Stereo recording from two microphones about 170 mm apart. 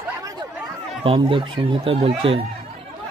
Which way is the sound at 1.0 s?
30° right (ahead or behind).